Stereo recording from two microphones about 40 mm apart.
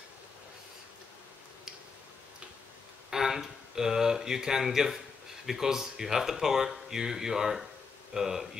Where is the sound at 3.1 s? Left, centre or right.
Centre.